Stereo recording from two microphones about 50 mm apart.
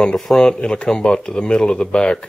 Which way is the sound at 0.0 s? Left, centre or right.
Centre.